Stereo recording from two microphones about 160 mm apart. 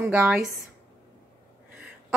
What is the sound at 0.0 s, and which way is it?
Speech, 10° right (ahead or behind).